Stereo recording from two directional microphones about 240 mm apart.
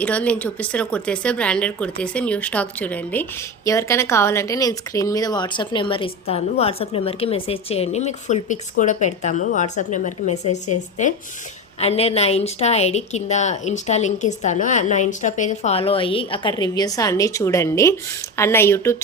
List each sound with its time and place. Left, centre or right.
0.0 s speech: centre